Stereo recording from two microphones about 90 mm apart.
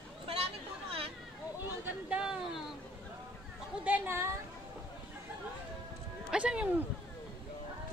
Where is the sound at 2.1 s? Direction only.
10° right (ahead or behind).